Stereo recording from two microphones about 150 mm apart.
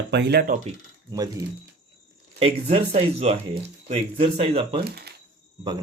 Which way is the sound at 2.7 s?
45° right (ahead or behind).